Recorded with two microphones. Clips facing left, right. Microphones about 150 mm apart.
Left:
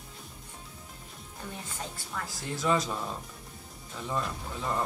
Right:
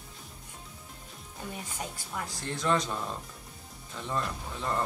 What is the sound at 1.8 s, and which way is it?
Speech, 10° right (ahead or behind).